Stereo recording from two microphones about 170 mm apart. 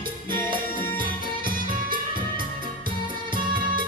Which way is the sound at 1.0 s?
55° right (ahead or behind).